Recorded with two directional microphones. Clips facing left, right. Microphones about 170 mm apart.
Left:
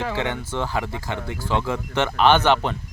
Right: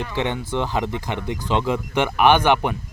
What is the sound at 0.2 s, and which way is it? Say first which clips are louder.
Speech: right 2 dB; 15° right (ahead or behind).